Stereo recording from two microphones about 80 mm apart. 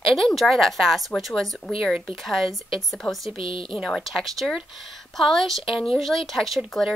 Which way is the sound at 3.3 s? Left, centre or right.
Left.